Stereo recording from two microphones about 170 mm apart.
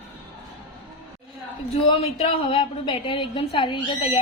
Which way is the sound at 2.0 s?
35° left (ahead or behind).